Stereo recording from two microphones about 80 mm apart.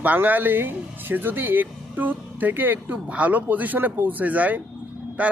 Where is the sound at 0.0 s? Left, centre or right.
Right.